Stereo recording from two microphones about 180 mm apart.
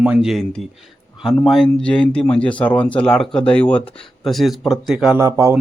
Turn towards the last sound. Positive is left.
turn(degrees=-15)  # may be behind; listen again after turning